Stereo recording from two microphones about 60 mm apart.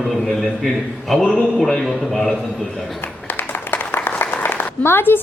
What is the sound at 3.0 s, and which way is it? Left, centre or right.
Applause, left.